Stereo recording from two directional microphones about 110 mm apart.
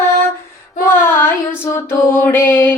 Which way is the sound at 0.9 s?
20° left (ahead or behind).